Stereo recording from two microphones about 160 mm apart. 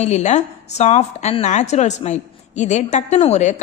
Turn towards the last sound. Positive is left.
turn(degrees=45)  # may be behind; listen again after turning